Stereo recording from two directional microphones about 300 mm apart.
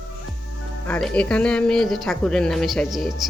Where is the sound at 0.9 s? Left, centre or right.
Centre.